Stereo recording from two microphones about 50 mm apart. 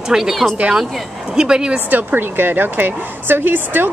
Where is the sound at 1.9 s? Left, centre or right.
Right.